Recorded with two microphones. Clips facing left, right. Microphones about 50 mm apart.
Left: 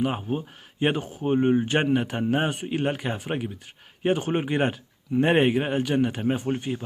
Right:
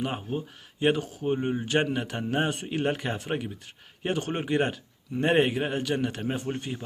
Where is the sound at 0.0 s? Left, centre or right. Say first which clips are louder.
Left 4 dB; centre.